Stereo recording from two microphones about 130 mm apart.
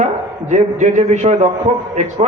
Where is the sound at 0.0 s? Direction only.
65° right (ahead or behind).